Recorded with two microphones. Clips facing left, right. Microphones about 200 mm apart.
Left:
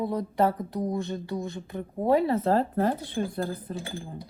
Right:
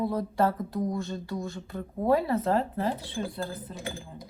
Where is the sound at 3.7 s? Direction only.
30° left (ahead or behind).